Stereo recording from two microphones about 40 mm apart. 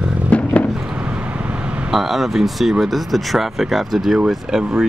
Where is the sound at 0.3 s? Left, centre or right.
Left.